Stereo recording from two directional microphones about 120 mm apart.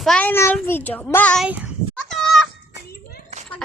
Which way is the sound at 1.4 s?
10° right (ahead or behind).